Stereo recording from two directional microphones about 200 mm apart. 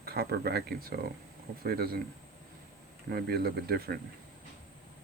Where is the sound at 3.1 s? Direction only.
50° right (ahead or behind).